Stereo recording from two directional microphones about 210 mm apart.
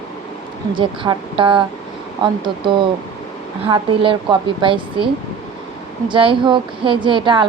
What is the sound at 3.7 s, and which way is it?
A woman's voice, 25° right (ahead or behind).